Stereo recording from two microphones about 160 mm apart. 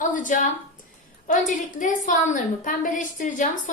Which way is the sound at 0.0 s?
55° left (ahead or behind).